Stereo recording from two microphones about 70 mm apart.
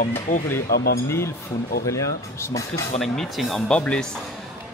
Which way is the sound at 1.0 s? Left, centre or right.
Left.